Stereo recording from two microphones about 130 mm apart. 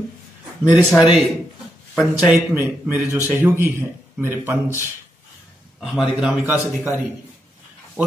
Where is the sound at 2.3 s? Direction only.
10° right (ahead or behind).